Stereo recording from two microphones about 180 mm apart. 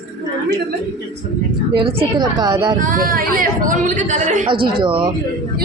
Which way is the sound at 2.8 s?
50° right (ahead or behind).